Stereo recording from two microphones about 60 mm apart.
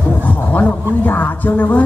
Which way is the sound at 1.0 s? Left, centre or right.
Left.